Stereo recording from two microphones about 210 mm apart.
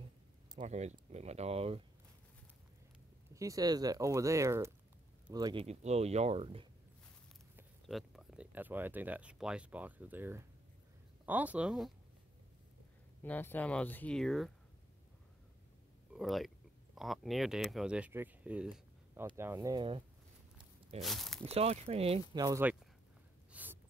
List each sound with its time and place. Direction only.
0.6 s speech: 35° right (ahead or behind)
3.3 s speech: 15° right (ahead or behind)
7.9 s speech: centre (ahead or behind)
13.2 s speech: 10° left (ahead or behind)
16.1 s speech: centre (ahead or behind); by 20.0 s 20° right (ahead or behind)
21.0 s speech: centre (ahead or behind)
21.5 s speech: 30° right (ahead or behind); by 22.8 s 15° right (ahead or behind)
23.5 s gasp: 10° right (ahead or behind)